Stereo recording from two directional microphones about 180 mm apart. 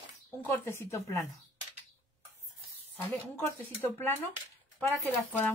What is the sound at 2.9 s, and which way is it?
Speech, 10° left (ahead or behind).